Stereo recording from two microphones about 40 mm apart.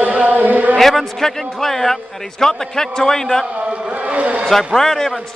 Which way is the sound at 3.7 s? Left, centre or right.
Right.